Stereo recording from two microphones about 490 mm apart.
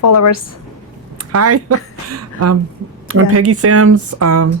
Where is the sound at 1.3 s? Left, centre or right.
Right.